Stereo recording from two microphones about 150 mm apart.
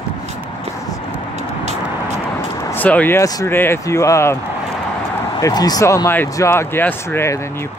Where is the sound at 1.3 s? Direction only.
50° right (ahead or behind).